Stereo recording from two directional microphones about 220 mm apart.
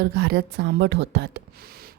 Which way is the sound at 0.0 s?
45° right (ahead or behind).